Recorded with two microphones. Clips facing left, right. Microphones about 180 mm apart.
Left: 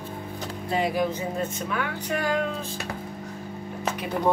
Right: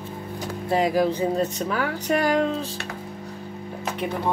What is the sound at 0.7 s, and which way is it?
Speech, 40° right (ahead or behind).